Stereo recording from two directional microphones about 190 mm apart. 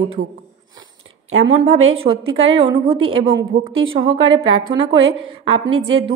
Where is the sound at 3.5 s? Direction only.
50° right (ahead or behind).